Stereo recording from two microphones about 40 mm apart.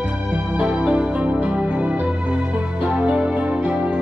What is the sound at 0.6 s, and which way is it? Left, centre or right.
Music, right.